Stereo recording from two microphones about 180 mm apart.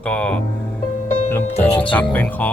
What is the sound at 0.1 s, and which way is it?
Speech, 5° left (ahead or behind).